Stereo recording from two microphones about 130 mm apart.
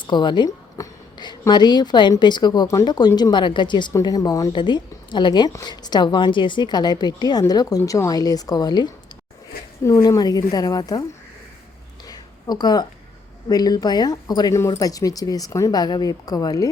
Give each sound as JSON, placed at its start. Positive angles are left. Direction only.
{"t": 0.1, "sound": "a woman's voice", "side_deg": 35}
{"t": 12.0, "sound": "a sound", "side_deg": 30}
{"t": 13.5, "sound": "speech", "side_deg": 30}